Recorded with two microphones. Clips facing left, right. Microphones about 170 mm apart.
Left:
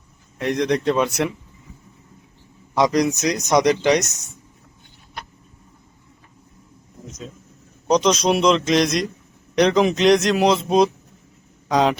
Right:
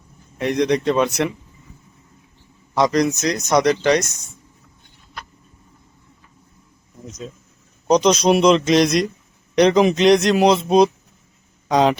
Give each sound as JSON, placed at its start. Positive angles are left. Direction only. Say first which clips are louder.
{"t": 0.3, "sound": "a man's voice", "louder": "right 2 dB", "side_deg": 0}
{"t": 2.7, "sound": "speech", "louder": "right 1 dB", "side_deg": 15}
{"t": 7.9, "sound": "a man's voice", "louder": "right 3 dB", "side_deg": 0}